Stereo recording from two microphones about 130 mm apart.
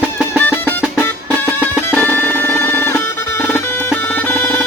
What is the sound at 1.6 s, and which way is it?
Music, 15° left (ahead or behind).